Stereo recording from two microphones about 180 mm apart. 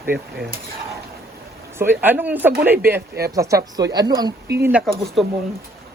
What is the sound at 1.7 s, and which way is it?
A man's voice, 10° right (ahead or behind).